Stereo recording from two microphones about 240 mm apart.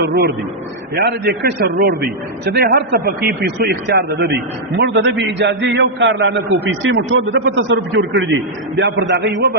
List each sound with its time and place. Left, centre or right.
0.0 s a man's voice: right